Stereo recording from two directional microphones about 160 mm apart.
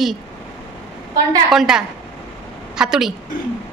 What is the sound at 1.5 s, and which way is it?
A woman's voice, 5° right (ahead or behind).